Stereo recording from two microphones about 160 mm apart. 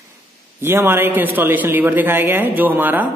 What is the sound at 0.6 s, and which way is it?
A man's voice, 15° right (ahead or behind).